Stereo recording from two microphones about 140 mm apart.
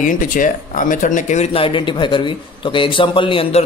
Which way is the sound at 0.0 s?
75° left (ahead or behind).